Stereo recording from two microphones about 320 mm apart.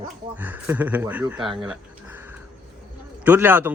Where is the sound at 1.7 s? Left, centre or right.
Centre.